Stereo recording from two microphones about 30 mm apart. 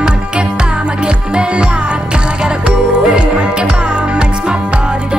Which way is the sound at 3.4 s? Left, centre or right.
Right.